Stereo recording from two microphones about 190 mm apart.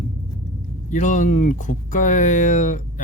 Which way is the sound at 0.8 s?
40° left (ahead or behind).